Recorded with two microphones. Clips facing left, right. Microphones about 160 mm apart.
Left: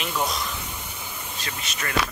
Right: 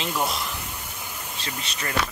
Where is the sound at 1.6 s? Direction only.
25° right (ahead or behind).